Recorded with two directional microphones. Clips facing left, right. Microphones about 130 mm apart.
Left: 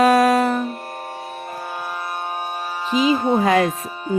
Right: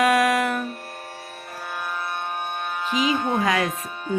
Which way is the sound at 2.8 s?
35° left (ahead or behind).